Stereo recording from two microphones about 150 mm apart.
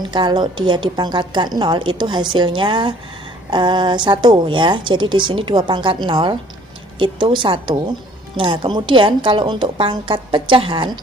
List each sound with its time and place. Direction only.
0.0 s a woman's voice: 30° right (ahead or behind)